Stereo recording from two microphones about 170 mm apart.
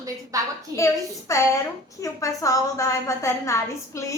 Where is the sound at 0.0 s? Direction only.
20° right (ahead or behind).